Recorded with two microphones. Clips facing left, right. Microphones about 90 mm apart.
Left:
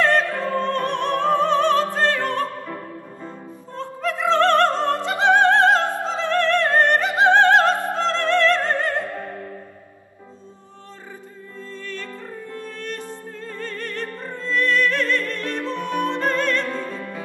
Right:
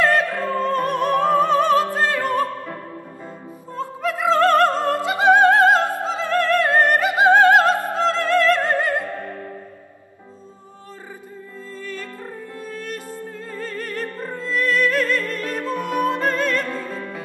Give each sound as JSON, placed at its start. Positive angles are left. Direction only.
{"t": 0.3, "sound": "music", "side_deg": -20}
{"t": 0.7, "sound": "opera", "side_deg": -5}
{"t": 3.7, "sound": "music", "side_deg": -5}
{"t": 5.0, "sound": "opera", "side_deg": -5}
{"t": 11.8, "sound": "music", "side_deg": -10}
{"t": 16.6, "sound": "music", "side_deg": -20}